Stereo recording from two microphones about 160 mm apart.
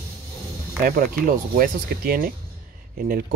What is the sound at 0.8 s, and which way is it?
Speech, 60° right (ahead or behind).